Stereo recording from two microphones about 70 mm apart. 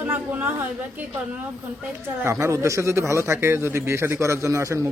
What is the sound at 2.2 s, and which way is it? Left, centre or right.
Speech, right.